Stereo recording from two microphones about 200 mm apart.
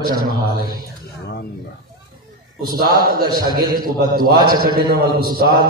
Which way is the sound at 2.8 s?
50° right (ahead or behind).